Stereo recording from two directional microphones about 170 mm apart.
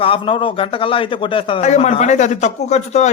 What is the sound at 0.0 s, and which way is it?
A man's voice, 30° left (ahead or behind).